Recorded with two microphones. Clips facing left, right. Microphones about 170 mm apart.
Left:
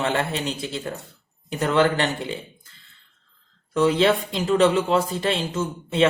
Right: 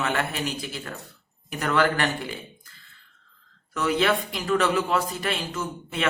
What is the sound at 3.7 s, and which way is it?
Speech, 30° left (ahead or behind).